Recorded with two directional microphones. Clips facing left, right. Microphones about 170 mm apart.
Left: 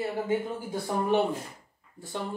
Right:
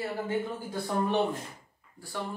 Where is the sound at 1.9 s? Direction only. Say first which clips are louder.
Left 2 dB; 20° left (ahead or behind).